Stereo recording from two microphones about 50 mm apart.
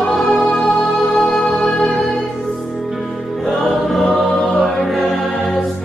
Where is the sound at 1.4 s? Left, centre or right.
Centre.